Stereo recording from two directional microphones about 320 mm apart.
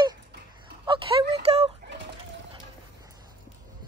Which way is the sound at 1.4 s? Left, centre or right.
Centre.